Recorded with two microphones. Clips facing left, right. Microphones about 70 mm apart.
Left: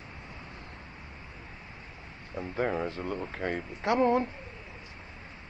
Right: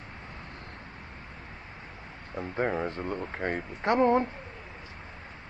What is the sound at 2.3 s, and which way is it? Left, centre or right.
Speech, centre.